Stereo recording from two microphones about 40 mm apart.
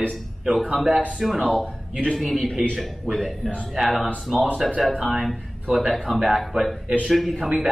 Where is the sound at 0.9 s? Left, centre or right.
Right.